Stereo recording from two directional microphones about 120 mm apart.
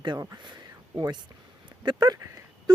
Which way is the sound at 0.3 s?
40° right (ahead or behind).